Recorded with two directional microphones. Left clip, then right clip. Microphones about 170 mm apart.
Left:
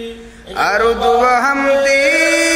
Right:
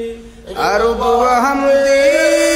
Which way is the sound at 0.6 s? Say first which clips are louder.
Left 1 dB; 5° right (ahead or behind).